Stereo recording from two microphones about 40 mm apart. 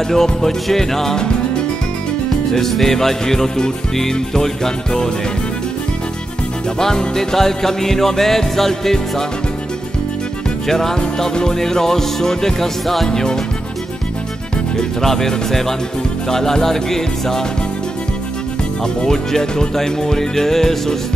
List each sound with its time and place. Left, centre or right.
0.1 s music: centre
2.5 s music: centre
6.8 s music: centre
10.7 s music: centre
14.8 s music: centre
19.0 s music: centre